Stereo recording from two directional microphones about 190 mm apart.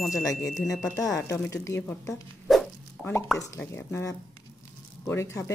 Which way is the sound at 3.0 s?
5° right (ahead or behind).